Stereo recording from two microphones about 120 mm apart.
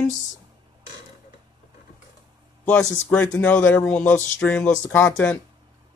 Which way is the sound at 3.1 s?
10° left (ahead or behind).